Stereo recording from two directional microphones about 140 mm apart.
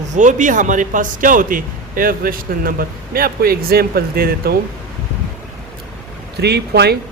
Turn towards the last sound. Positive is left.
turn(degrees=-90)